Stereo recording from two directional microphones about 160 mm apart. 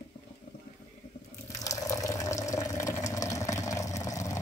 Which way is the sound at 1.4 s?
20° left (ahead or behind).